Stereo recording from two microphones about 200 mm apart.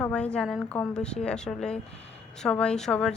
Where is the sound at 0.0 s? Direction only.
5° left (ahead or behind).